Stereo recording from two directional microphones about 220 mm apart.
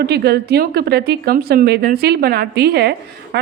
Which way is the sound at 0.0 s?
45° right (ahead or behind).